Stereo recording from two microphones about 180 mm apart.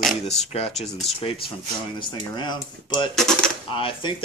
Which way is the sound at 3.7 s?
30° left (ahead or behind).